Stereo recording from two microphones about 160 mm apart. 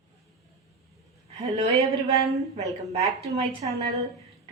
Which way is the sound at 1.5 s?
40° right (ahead or behind).